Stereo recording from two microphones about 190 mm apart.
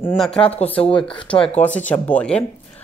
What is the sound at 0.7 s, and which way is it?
Speech, 30° left (ahead or behind).